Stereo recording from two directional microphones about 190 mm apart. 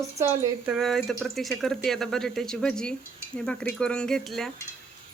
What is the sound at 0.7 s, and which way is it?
Speech, centre (ahead or behind).